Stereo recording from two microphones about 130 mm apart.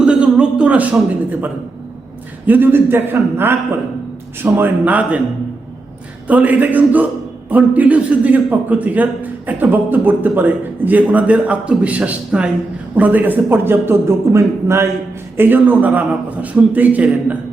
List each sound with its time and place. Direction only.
0.0 s a sound: 5° right (ahead or behind)
2.5 s a man's voice: 15° right (ahead or behind)
6.2 s a man's voice: 10° right (ahead or behind)